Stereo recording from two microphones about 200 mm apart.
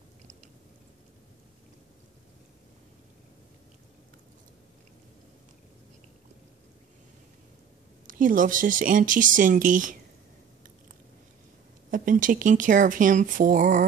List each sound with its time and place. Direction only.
8.1 s speech: 40° right (ahead or behind)
11.9 s speech: 40° right (ahead or behind)